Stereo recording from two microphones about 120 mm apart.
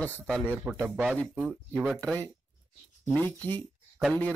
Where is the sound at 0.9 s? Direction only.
Centre (ahead or behind).